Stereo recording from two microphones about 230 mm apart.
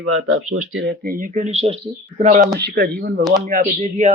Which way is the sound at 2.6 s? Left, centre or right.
Right.